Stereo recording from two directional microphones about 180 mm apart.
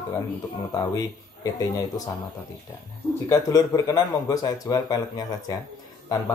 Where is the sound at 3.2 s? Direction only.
20° left (ahead or behind).